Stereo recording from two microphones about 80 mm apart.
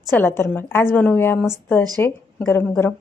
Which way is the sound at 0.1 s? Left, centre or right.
Left.